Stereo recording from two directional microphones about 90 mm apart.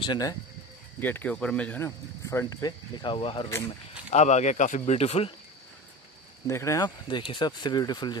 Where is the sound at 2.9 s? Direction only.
65° left (ahead or behind).